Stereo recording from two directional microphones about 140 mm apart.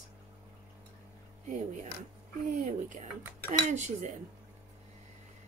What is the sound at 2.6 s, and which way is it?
A woman's voice, 60° right (ahead or behind).